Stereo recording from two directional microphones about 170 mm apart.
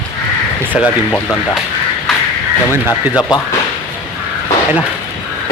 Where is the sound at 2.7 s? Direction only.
20° left (ahead or behind).